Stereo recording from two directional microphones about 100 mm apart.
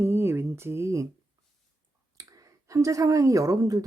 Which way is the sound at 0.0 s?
25° right (ahead or behind).